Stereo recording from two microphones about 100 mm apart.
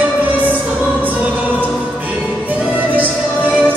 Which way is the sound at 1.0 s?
20° right (ahead or behind).